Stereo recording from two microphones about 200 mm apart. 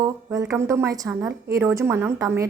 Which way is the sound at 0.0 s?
15° right (ahead or behind).